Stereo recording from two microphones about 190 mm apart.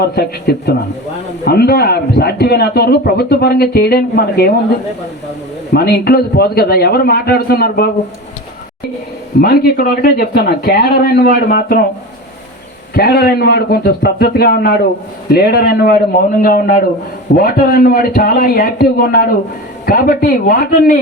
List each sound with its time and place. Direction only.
0.0 s a man's voice: 60° left (ahead or behind)
5.7 s a man's voice: 55° left (ahead or behind)
9.4 s speech: 55° left (ahead or behind)
12.9 s a man's voice: 55° left (ahead or behind)